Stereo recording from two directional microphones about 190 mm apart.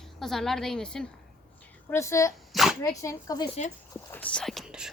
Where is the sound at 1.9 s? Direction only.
15° left (ahead or behind).